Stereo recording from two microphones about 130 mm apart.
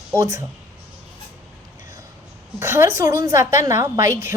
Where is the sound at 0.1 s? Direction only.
20° right (ahead or behind).